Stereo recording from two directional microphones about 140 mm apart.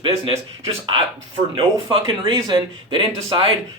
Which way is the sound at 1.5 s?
40° right (ahead or behind).